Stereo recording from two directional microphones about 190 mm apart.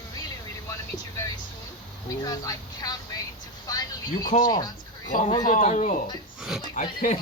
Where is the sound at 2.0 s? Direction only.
20° left (ahead or behind).